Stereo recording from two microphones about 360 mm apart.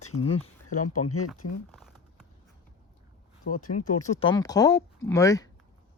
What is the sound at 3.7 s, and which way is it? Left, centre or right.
Speech, centre.